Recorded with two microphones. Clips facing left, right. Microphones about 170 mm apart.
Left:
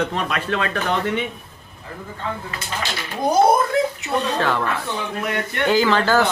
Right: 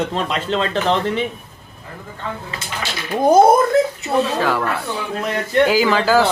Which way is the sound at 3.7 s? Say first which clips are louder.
Right 4 dB; 40° right (ahead or behind).